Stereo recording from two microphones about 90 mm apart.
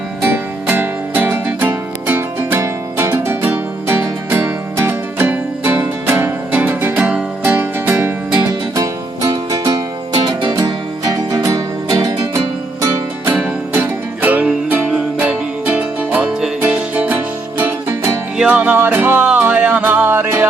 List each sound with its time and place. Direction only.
0.3 s music: 20° right (ahead or behind)
8.7 s music: 40° right (ahead or behind)
13.7 s music: 20° right (ahead or behind)